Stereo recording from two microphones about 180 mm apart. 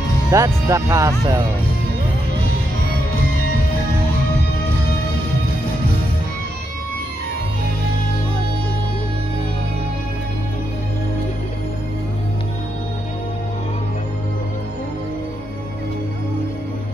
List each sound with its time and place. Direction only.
0.3 s speech: 15° right (ahead or behind)